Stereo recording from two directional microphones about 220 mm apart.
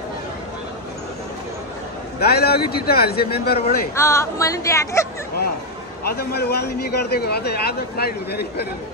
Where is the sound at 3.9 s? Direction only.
15° left (ahead or behind).